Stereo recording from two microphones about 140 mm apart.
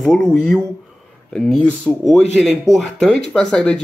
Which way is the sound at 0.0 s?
5° left (ahead or behind).